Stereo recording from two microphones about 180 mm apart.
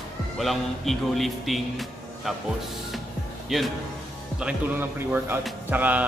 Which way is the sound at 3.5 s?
Centre (ahead or behind).